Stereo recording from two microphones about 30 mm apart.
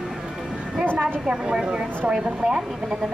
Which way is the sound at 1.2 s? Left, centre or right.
Right.